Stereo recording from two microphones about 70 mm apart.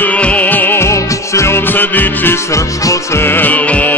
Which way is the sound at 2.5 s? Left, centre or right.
Left.